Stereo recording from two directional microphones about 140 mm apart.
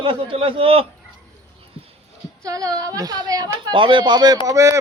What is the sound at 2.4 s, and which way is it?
Speech, 25° right (ahead or behind).